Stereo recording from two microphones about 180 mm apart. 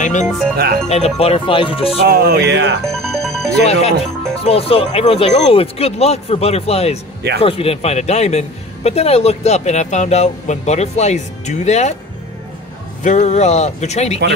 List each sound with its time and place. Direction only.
0.0 s speech: 45° left (ahead or behind)
2.0 s music: 60° right (ahead or behind); by 2.8 s 75° right (ahead or behind)
3.0 s music: centre (ahead or behind)
3.5 s speech: 35° left (ahead or behind)
13.0 s speech: 40° left (ahead or behind)